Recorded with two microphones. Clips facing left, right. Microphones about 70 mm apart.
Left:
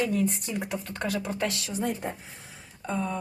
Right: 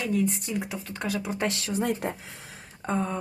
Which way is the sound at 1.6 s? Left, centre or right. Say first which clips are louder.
Right 2 dB; right.